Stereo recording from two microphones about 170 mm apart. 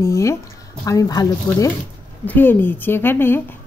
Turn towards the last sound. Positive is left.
turn(degrees=10)  # may be behind; listen again after turning